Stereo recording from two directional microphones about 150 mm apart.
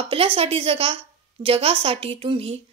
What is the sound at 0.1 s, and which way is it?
A woman's voice, 35° right (ahead or behind).